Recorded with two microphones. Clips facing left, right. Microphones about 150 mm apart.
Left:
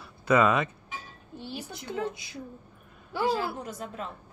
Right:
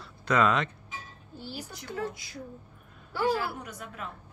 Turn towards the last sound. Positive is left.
turn(degrees=30)  # may be behind; listen again after turning